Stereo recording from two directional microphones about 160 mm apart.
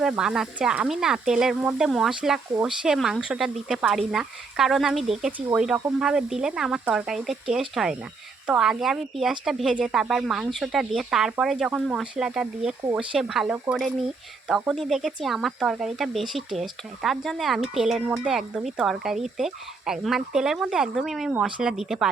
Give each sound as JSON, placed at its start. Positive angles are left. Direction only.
{"t": 0.0, "sound": "speech", "side_deg": -5}